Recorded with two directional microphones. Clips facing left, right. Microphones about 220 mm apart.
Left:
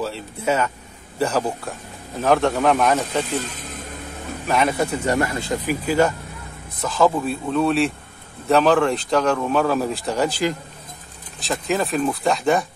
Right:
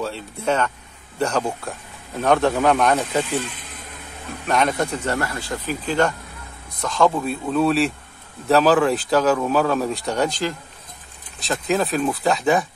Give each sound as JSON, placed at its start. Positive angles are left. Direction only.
{"t": 0.0, "sound": "a man's voice", "side_deg": 5}
{"t": 3.3, "sound": "speech", "side_deg": 40}
{"t": 4.5, "sound": "speech", "side_deg": 5}
{"t": 5.9, "sound": "a man's voice", "side_deg": 5}